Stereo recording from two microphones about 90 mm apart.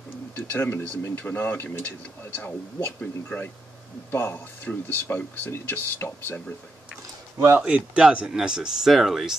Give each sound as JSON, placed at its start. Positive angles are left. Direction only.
{"t": 0.5, "sound": "speech", "side_deg": 20}
{"t": 7.5, "sound": "speech", "side_deg": -15}